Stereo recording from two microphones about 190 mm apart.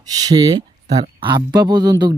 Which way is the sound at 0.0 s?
20° right (ahead or behind).